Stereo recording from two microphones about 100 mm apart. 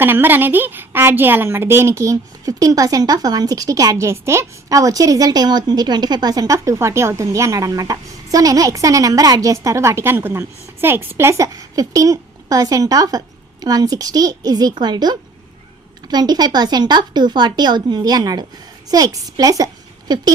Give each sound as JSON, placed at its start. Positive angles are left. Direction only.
{"t": 0.0, "sound": "a woman's voice", "side_deg": -20}